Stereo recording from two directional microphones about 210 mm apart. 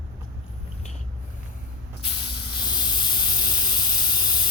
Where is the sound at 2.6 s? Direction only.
20° left (ahead or behind).